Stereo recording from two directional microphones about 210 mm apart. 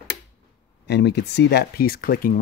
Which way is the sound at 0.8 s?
50° left (ahead or behind).